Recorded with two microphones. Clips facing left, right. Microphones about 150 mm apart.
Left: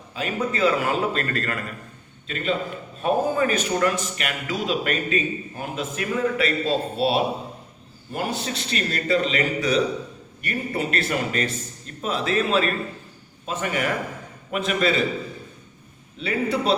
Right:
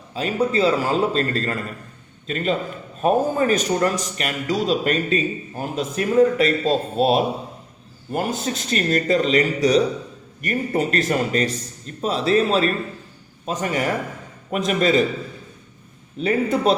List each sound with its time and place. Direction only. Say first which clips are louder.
0.1 s a man's voice: right 5 dB; 35° right (ahead or behind)
2.2 s a man's voice: right 3 dB; 40° right (ahead or behind)
16.2 s a man's voice: right 4 dB; 45° right (ahead or behind)